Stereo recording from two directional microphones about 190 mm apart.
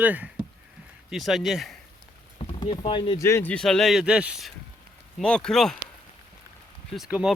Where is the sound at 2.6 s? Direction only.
25° left (ahead or behind).